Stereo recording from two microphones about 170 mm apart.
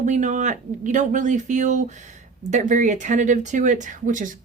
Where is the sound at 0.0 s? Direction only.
45° right (ahead or behind).